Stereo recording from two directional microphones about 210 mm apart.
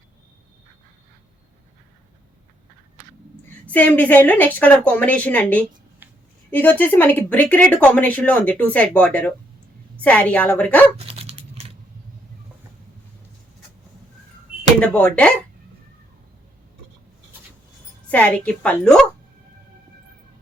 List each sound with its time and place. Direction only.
3.7 s speech: 5° left (ahead or behind)
6.0 s a sound: 10° right (ahead or behind)
6.5 s speech: 10° left (ahead or behind)
10.9 s dog: 25° right (ahead or behind)
14.8 s a woman's voice: 5° left (ahead or behind)
18.1 s a woman's voice: 5° left (ahead or behind)